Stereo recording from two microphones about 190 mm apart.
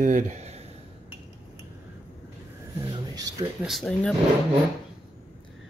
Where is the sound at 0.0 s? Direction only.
40° right (ahead or behind).